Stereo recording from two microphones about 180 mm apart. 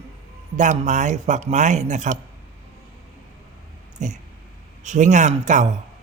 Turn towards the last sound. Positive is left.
turn(degrees=-40)  # may be behind; listen again after turning